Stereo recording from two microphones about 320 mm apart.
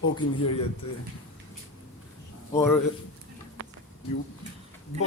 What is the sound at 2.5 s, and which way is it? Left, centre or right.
Speech, centre.